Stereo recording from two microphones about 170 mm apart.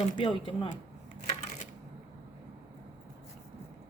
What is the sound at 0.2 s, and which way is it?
Speech, 30° left (ahead or behind).